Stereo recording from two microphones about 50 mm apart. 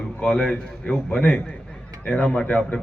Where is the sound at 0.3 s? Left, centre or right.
Centre.